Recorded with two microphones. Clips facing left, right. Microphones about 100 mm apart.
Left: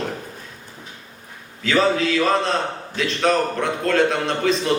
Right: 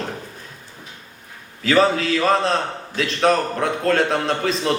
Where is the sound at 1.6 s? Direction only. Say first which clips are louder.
Right 2 dB; 40° right (ahead or behind).